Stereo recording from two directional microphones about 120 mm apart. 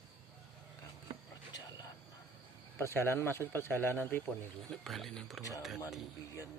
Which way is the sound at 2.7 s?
20° left (ahead or behind).